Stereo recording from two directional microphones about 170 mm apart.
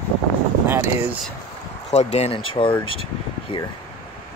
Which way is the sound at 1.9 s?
40° left (ahead or behind).